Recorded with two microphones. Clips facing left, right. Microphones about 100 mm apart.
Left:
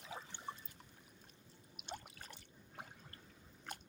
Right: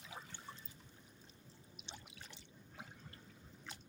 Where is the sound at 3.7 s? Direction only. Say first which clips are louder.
Left 5 dB; 50° left (ahead or behind).